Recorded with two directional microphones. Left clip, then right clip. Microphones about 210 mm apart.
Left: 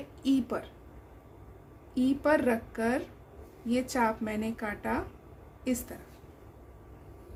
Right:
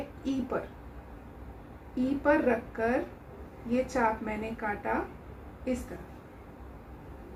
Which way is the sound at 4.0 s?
55° left (ahead or behind).